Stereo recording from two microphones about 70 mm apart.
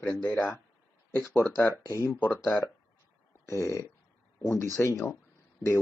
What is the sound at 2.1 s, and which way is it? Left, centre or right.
Speech, left.